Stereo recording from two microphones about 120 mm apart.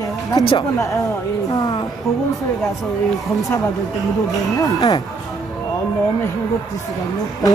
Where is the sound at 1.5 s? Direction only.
35° left (ahead or behind).